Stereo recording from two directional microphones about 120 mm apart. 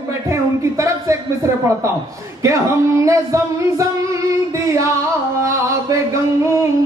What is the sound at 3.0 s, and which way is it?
Music, 25° right (ahead or behind).